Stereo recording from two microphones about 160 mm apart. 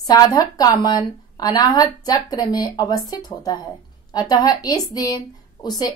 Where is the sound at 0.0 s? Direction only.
25° left (ahead or behind).